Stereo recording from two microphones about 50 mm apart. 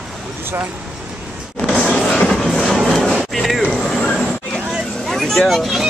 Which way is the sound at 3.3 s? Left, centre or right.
Centre.